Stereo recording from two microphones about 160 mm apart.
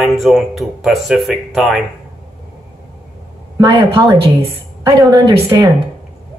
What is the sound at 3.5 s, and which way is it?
Speech, 20° right (ahead or behind).